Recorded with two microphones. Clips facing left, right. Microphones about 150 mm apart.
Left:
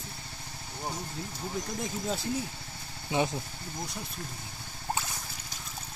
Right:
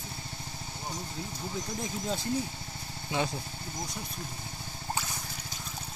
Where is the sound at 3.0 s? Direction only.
20° left (ahead or behind).